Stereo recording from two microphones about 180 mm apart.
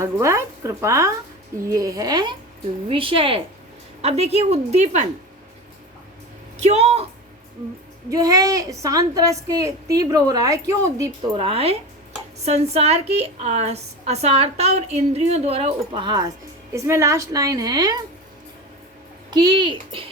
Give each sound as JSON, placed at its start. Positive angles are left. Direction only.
{"t": 0.0, "sound": "a woman's voice", "side_deg": -15}
{"t": 6.6, "sound": "a woman's voice", "side_deg": -40}
{"t": 8.1, "sound": "a woman's voice", "side_deg": -20}
{"t": 11.3, "sound": "a woman's voice", "side_deg": -30}
{"t": 19.3, "sound": "a woman's voice", "side_deg": -25}